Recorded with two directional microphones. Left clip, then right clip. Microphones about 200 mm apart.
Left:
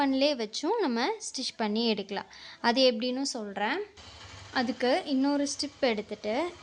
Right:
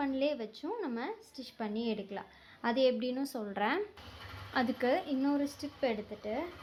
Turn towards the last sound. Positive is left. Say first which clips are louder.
# left 6 dB
turn(degrees=30)  # may be behind; listen again after turning